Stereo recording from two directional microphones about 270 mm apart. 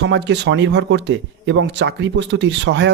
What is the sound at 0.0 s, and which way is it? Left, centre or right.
Speech, right.